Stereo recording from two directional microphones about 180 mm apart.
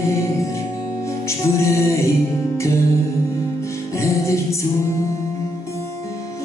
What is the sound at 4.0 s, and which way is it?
Music, 15° left (ahead or behind).